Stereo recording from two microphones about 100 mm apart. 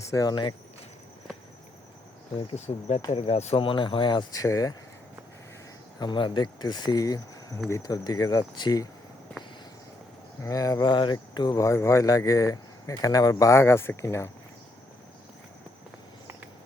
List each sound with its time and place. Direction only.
0.1 s speech: 35° left (ahead or behind)
2.5 s speech: 90° left
3.1 s speech: 75° left (ahead or behind); by 4.7 s 35° left (ahead or behind)
6.0 s speech: 50° left (ahead or behind)
10.4 s speech: 40° left (ahead or behind)